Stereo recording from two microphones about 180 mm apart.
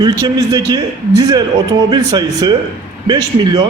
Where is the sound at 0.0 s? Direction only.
20° right (ahead or behind).